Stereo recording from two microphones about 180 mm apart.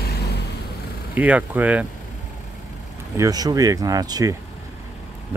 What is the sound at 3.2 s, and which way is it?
Speech, 20° right (ahead or behind).